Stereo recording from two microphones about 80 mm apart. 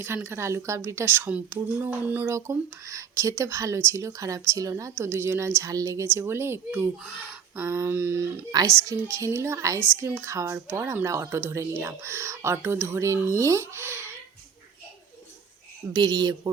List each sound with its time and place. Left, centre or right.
0.0 s speech: right
1.5 s a sound: right
2.3 s speech: right
15.9 s speech: right